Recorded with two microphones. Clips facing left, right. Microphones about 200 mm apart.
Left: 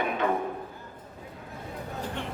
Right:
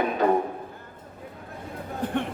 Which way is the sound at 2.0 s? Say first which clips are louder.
Right 9 dB; 55° right (ahead or behind).